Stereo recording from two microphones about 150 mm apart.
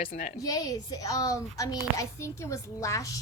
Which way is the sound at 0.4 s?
25° left (ahead or behind).